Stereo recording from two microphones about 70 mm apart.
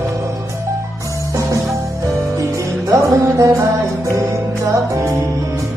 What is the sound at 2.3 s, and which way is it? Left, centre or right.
Music, right.